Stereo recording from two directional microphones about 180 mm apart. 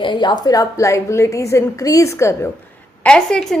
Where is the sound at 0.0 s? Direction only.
25° left (ahead or behind).